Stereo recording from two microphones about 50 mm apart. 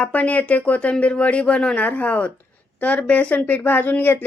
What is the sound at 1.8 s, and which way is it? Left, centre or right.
A woman's voice, left.